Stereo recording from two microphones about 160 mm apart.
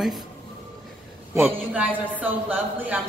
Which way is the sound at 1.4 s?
5° right (ahead or behind).